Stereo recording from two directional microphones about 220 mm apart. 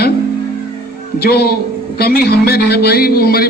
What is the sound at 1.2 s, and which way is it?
Speech, 45° left (ahead or behind).